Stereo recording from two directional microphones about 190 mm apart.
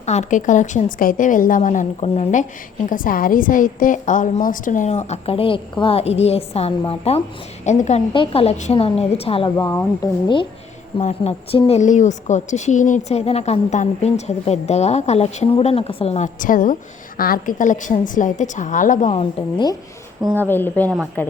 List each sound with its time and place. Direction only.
0.0 s a woman's voice: 35° left (ahead or behind)
9.6 s speech: 15° left (ahead or behind)
10.9 s a woman's voice: 35° left (ahead or behind)
20.3 s speech: 10° left (ahead or behind)